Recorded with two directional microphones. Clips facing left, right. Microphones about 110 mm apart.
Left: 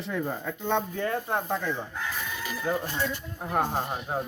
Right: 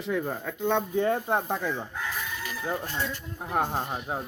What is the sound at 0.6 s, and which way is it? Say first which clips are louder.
Speech: right 3 dB; 15° right (ahead or behind).